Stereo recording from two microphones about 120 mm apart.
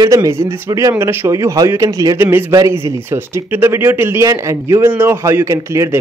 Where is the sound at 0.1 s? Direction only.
25° right (ahead or behind).